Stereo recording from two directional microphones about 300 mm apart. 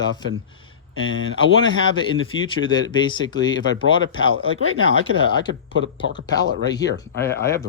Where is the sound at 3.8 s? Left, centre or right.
Left.